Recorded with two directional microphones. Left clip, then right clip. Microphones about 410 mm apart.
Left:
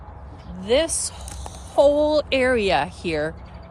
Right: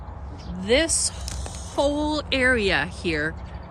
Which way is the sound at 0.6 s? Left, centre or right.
Centre.